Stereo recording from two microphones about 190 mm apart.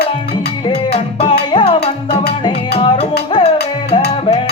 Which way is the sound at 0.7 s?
30° left (ahead or behind).